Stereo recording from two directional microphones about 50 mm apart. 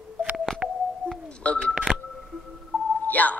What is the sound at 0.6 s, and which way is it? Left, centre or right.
Music, centre.